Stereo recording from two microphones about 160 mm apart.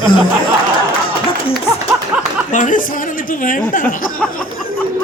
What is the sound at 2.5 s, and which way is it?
A man's voice, 55° left (ahead or behind).